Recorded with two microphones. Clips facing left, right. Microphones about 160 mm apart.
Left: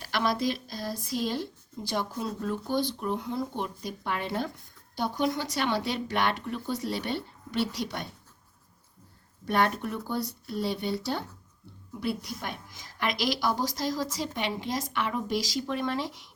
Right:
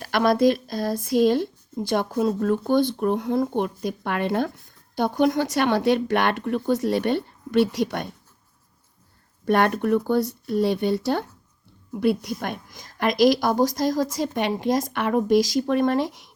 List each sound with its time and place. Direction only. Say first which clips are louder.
0.0 s a woman's voice: right 9 dB; 50° right (ahead or behind)
9.5 s speech: right 8 dB; 60° right (ahead or behind)
12.4 s a woman's voice: right 7 dB; 50° right (ahead or behind)